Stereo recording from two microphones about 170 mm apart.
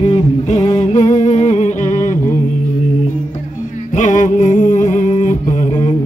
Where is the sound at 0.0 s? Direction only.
40° left (ahead or behind).